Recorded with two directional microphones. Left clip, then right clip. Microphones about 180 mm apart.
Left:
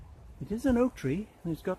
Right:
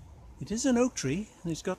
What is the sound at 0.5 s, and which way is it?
Speech, 25° right (ahead or behind).